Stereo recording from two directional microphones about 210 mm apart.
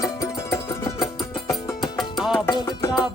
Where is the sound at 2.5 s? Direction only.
20° left (ahead or behind).